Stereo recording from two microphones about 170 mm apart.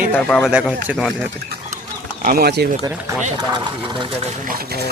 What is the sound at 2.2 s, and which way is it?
Speech, 65° right (ahead or behind).